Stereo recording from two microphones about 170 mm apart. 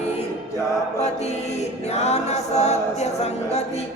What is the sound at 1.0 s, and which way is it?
Chant, 40° left (ahead or behind).